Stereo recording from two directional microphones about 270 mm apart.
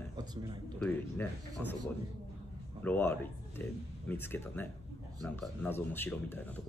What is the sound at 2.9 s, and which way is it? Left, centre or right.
A man's voice, centre.